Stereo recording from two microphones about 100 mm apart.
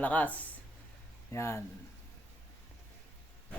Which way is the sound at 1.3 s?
25° left (ahead or behind).